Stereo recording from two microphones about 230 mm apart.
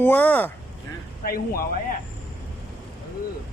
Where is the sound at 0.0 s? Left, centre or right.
Centre.